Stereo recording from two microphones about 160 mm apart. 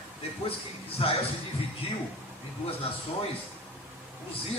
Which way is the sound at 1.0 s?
40° left (ahead or behind).